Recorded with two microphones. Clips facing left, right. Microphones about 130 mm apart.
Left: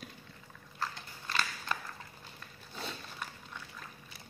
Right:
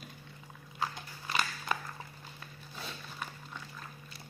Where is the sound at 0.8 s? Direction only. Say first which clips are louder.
Right 3 dB; 10° right (ahead or behind).